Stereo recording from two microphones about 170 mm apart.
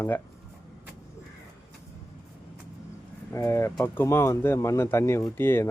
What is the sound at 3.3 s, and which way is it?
Speech, 15° left (ahead or behind).